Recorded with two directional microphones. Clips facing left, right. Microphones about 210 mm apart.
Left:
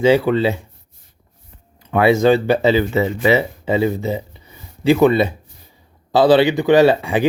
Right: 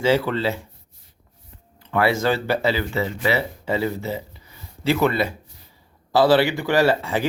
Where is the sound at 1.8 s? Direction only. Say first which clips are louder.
Left 7 dB; 20° left (ahead or behind).